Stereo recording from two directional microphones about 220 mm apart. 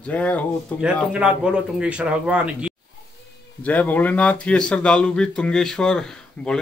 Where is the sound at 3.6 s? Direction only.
5° left (ahead or behind).